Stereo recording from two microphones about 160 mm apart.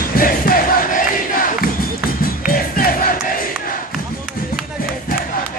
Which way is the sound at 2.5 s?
65° left (ahead or behind).